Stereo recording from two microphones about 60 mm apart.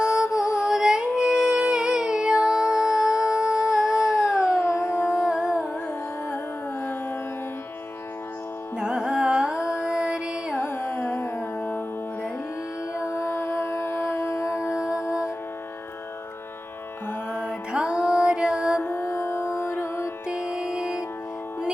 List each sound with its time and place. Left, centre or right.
0.0 s music: centre
4.4 s howl: left
5.0 s music: centre
8.8 s carnatic music: centre
9.8 s music: centre
10.5 s carnatic music: left
13.0 s music: left
14.7 s music: centre
17.4 s music: centre
18.8 s music: left
20.2 s music: centre